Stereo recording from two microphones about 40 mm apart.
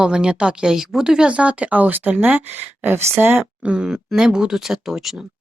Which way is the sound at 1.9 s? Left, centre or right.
Right.